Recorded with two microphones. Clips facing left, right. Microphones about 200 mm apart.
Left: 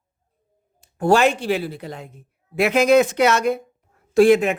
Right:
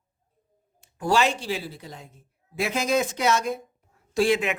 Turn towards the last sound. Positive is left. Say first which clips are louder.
# left 8 dB
turn(degrees=50)  # may be behind; listen again after turning